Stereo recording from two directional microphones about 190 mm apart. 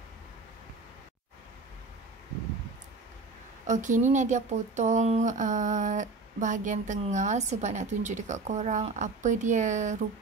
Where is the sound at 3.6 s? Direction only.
40° right (ahead or behind).